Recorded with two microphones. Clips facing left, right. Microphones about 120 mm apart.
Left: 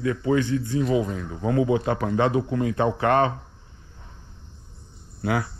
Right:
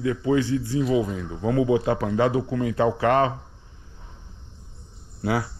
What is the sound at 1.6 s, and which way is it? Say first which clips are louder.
Speech: right 2 dB; 25° right (ahead or behind).